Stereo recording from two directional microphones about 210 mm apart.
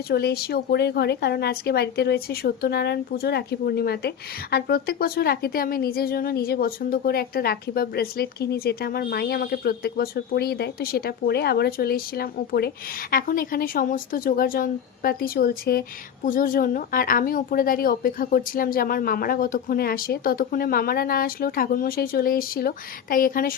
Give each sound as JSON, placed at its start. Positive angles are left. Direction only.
{"t": 0.1, "sound": "speech", "side_deg": 50}